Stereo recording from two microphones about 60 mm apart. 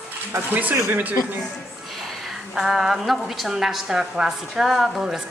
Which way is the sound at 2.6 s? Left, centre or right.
Centre.